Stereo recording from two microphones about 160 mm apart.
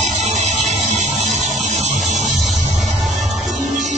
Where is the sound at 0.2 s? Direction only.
45° right (ahead or behind).